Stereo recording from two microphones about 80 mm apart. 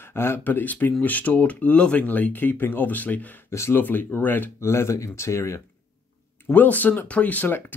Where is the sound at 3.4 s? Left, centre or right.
Left.